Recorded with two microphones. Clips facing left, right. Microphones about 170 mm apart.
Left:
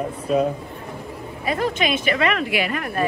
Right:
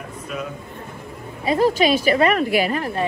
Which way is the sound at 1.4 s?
30° right (ahead or behind).